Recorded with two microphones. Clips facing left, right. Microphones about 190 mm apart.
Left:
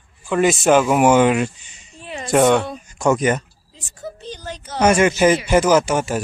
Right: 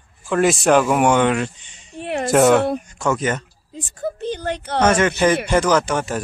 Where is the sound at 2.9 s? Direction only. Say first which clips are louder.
Left 4 dB; 15° left (ahead or behind).